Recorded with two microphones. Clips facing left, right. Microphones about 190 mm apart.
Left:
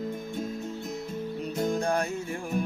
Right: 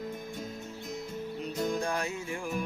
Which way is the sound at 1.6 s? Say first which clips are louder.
Left 4 dB; 50° left (ahead or behind).